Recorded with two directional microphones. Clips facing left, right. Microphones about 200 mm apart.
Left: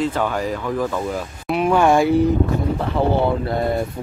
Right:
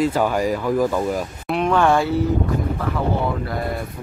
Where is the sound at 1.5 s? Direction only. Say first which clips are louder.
Left 2 dB; 5° left (ahead or behind).